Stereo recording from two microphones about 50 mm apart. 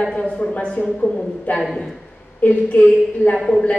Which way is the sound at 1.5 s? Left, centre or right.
Left.